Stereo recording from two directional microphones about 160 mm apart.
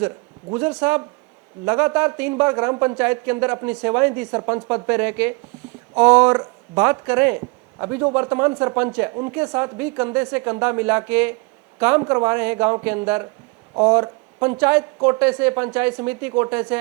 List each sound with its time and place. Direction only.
0.8 s speech: 10° right (ahead or behind)
14.6 s speech: 10° right (ahead or behind)